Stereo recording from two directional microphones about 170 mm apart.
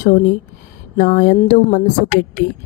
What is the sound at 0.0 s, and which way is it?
Speech, 45° left (ahead or behind).